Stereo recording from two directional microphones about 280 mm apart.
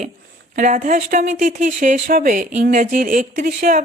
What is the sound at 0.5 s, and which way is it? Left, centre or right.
Speech, right.